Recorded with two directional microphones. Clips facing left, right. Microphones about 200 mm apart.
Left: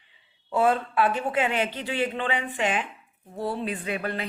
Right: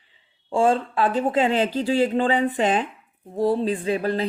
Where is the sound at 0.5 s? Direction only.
30° right (ahead or behind).